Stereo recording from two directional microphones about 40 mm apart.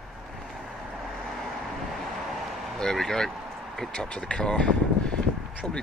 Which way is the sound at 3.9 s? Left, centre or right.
Left.